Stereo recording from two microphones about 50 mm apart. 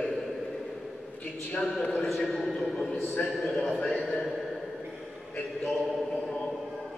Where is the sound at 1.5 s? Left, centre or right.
Centre.